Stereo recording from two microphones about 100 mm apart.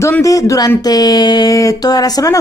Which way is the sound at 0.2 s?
35° left (ahead or behind).